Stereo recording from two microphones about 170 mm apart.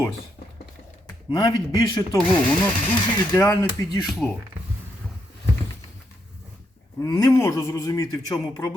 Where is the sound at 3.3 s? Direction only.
15° left (ahead or behind).